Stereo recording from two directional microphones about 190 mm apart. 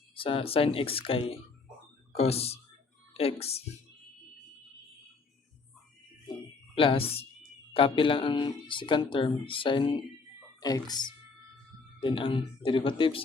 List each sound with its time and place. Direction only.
0.2 s speech: 30° left (ahead or behind)
6.7 s speech: 30° left (ahead or behind)